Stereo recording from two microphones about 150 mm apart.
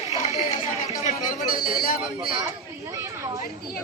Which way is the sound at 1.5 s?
75° left (ahead or behind).